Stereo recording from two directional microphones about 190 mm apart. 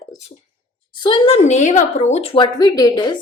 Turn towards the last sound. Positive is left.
turn(degrees=20)  # may be behind; listen again after turning